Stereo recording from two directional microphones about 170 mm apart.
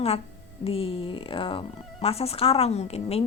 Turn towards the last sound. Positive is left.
turn(degrees=40)  # may be behind; listen again after turning